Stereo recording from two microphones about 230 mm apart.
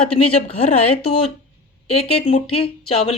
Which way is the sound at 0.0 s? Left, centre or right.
Left.